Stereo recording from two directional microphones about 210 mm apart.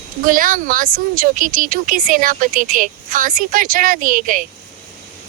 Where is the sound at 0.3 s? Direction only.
40° right (ahead or behind).